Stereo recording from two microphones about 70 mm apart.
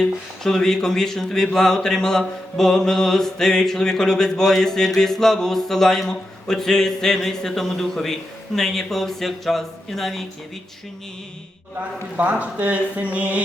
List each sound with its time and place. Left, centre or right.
0.4 s speech: centre
12.1 s speech: right